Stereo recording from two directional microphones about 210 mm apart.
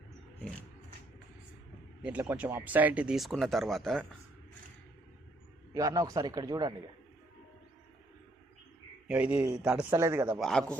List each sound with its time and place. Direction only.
2.0 s speech: 5° right (ahead or behind)
5.7 s a man's voice: 15° right (ahead or behind)
9.0 s a man's voice: 5° right (ahead or behind)
10.4 s speech: 5° left (ahead or behind)